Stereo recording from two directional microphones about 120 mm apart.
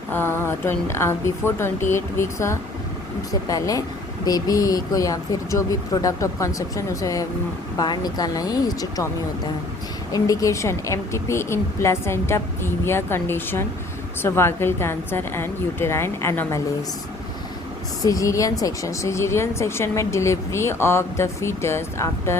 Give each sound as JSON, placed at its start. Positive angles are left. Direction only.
{"t": 0.1, "sound": "speech", "side_deg": 15}
{"t": 10.1, "sound": "speech", "side_deg": 30}
{"t": 18.0, "sound": "speech", "side_deg": 30}